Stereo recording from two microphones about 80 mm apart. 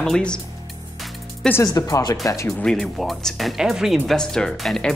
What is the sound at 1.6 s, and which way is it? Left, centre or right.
Speech, left.